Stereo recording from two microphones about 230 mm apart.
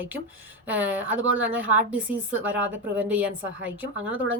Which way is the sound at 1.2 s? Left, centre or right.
Right.